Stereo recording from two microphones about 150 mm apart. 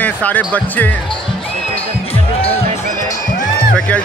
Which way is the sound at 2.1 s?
40° left (ahead or behind).